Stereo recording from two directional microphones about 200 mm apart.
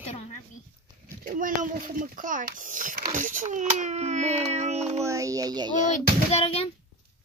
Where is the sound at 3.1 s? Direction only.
40° right (ahead or behind).